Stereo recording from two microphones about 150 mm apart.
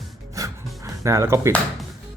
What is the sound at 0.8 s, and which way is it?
Speech, 20° right (ahead or behind).